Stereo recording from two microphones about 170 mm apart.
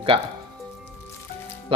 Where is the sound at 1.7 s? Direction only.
35° right (ahead or behind).